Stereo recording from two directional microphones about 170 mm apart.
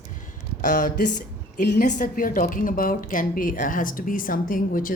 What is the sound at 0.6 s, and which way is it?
A woman's voice, 50° left (ahead or behind).